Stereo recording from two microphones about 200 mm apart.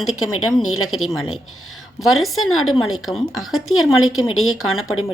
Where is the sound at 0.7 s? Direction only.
90° left.